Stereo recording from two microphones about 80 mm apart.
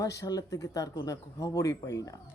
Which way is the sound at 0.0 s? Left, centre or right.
Left.